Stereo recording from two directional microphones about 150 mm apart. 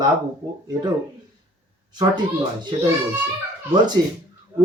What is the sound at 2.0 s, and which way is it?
Speech, 30° right (ahead or behind).